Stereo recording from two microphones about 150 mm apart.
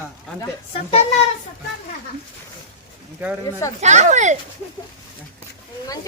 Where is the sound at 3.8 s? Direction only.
50° right (ahead or behind).